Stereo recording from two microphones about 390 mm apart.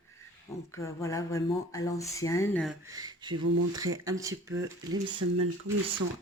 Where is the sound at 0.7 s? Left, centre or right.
Centre.